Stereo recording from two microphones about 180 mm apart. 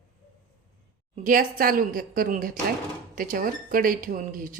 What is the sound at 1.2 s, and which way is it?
Speech, 50° right (ahead or behind).